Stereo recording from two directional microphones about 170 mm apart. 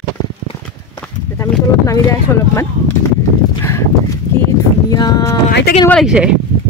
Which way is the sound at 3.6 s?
15° left (ahead or behind).